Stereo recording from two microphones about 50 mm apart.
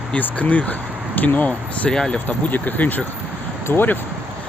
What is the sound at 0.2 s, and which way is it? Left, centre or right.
Speech, left.